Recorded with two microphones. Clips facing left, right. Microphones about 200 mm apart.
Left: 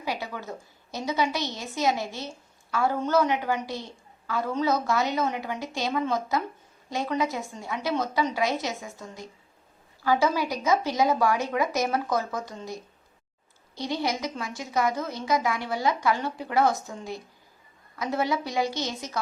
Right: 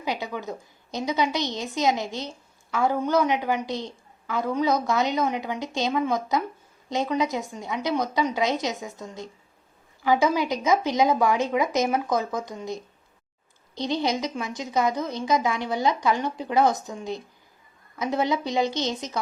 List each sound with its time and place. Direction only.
0.0 s a woman's voice: 20° right (ahead or behind)